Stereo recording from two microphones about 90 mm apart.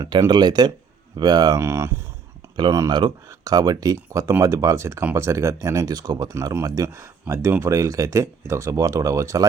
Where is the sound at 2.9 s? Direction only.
55° right (ahead or behind).